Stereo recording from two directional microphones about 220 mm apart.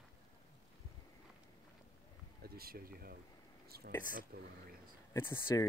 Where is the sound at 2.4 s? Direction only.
45° right (ahead or behind).